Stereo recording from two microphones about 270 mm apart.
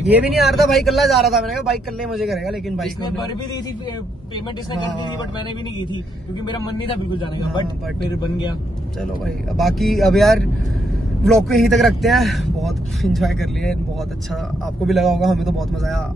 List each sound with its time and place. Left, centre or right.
0.1 s a man's voice: centre
6.4 s a man's voice: centre
8.2 s a man's voice: centre
9.2 s a man's voice: centre
14.9 s a man's voice: centre